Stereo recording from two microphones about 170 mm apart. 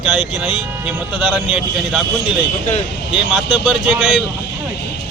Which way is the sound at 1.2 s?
5° right (ahead or behind).